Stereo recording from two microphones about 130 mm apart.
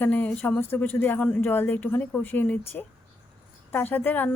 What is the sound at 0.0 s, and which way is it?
Speech, 10° left (ahead or behind).